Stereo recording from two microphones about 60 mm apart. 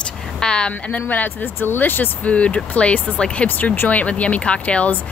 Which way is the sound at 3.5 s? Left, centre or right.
Left.